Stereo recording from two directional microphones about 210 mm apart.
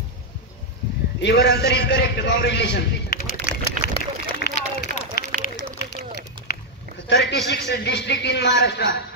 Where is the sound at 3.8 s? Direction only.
50° left (ahead or behind).